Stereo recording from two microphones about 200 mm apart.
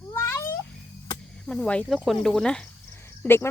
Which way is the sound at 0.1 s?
15° left (ahead or behind).